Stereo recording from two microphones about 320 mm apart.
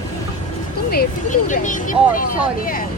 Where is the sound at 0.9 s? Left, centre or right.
Left.